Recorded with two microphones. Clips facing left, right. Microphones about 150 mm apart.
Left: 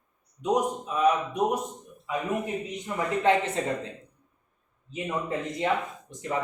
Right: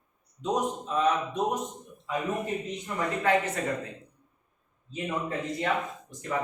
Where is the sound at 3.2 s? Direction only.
25° left (ahead or behind).